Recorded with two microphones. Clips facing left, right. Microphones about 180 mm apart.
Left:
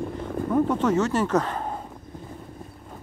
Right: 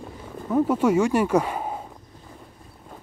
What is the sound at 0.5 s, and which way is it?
Speech, 10° right (ahead or behind).